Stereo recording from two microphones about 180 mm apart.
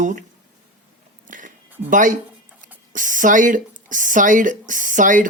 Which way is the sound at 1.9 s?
45° right (ahead or behind).